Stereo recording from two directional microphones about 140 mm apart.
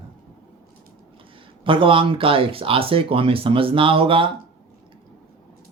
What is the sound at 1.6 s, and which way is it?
Speech, 40° right (ahead or behind).